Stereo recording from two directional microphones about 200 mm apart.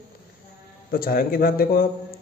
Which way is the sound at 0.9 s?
50° left (ahead or behind).